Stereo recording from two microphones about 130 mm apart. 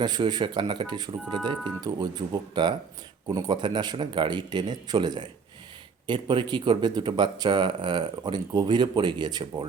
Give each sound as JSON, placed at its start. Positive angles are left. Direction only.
{"t": 0.0, "sound": "speech", "side_deg": -35}